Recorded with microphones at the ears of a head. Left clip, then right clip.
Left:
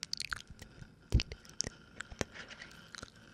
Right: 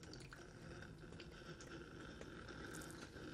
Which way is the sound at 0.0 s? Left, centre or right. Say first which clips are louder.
Left 17 dB; left.